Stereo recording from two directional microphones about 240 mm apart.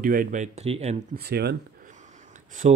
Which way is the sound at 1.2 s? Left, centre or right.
Right.